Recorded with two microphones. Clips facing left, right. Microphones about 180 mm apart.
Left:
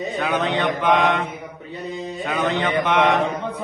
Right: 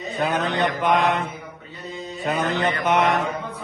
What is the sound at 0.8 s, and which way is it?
Speech, 40° right (ahead or behind).